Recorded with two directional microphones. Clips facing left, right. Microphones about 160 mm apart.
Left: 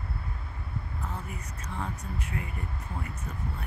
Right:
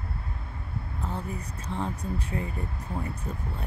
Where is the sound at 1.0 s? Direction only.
30° right (ahead or behind).